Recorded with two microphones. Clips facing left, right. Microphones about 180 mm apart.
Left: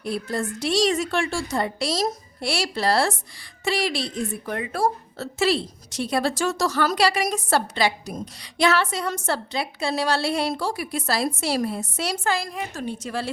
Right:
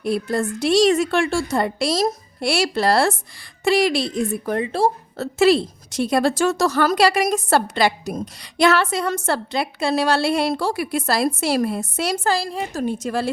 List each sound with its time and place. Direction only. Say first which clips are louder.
0.0 s a woman's voice: right 5 dB; 55° right (ahead or behind)
4.4 s a woman's voice: right 4 dB; 30° right (ahead or behind)
5.1 s a woman's voice: right 7 dB; 55° right (ahead or behind)
12.2 s a woman's voice: right 4 dB; 35° right (ahead or behind)
12.8 s a woman's voice: right 7 dB; 45° right (ahead or behind)